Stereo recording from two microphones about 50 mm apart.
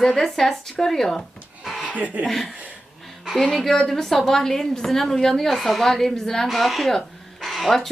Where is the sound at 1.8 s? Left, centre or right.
Right.